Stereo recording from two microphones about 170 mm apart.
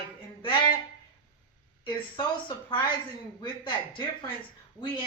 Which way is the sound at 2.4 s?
30° left (ahead or behind).